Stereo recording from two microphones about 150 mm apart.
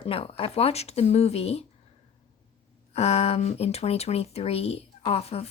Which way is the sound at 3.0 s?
45° left (ahead or behind).